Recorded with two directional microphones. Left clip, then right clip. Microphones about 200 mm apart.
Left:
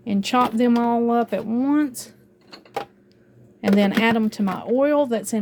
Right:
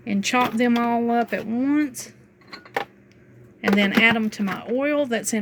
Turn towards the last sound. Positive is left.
turn(degrees=15)  # may be behind; listen again after turning